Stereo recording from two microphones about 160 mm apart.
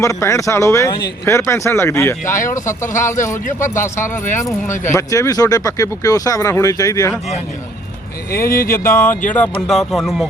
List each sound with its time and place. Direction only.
0.0 s speech: 20° left (ahead or behind)
4.7 s speech: 50° left (ahead or behind)
4.9 s speech: 20° left (ahead or behind)
8.4 s speech: 65° left (ahead or behind)
8.7 s speech: 15° left (ahead or behind); by 10.2 s centre (ahead or behind)